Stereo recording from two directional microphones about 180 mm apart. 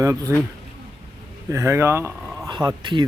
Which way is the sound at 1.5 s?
15° right (ahead or behind).